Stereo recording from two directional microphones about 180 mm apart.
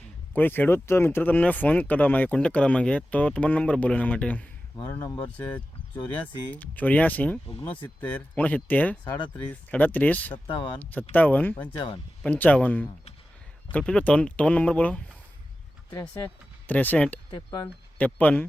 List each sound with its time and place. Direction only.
0.3 s speech: 10° left (ahead or behind)
17.3 s speech: 25° left (ahead or behind)
17.9 s speech: 10° left (ahead or behind)